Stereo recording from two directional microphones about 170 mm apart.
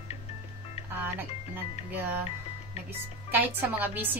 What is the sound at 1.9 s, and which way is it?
Speech, 10° right (ahead or behind).